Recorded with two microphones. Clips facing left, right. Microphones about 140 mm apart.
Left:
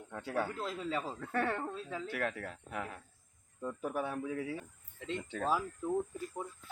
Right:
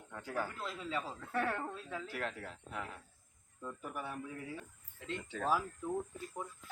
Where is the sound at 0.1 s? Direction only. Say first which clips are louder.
Left 4 dB; 70° left (ahead or behind).